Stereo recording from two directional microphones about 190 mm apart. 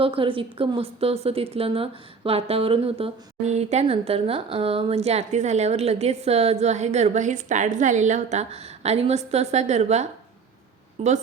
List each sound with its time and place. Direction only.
0.0 s a woman's voice: 30° right (ahead or behind)